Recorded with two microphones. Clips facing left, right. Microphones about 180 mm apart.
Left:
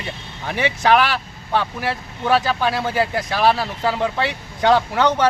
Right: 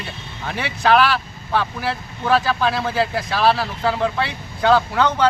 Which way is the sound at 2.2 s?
15° left (ahead or behind).